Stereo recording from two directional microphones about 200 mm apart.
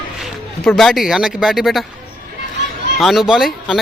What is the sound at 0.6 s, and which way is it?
A man's voice, centre (ahead or behind).